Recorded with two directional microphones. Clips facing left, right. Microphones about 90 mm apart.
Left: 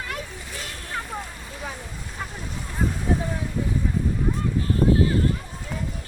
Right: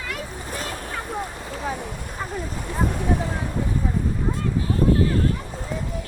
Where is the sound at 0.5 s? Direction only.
50° right (ahead or behind).